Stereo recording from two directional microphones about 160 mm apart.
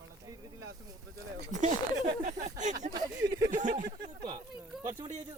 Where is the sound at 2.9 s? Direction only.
25° right (ahead or behind).